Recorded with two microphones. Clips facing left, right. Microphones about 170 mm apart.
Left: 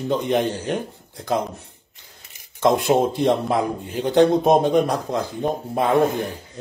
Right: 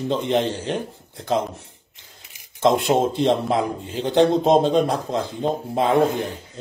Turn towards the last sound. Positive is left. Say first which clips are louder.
# even
turn(degrees=-20)  # may be behind; listen again after turning